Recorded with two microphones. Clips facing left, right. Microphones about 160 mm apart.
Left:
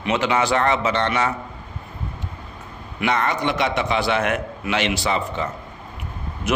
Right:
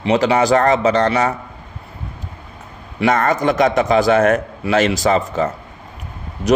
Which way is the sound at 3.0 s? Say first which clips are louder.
Right 6 dB; 45° right (ahead or behind).